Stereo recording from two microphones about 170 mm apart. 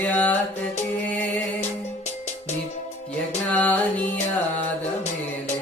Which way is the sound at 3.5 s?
10° left (ahead or behind).